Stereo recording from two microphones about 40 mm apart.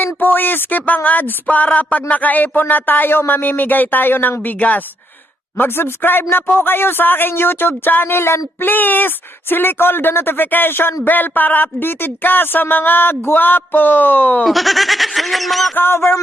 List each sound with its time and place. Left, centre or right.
0.0 s speech: left
5.5 s speech: left
8.1 s speech: left
14.4 s speech: centre
15.7 s a sound: left